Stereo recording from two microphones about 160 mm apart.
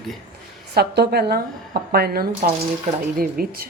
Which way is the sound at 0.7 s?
90° right.